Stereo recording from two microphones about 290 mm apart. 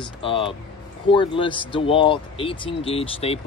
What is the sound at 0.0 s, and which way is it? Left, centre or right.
Speech, centre.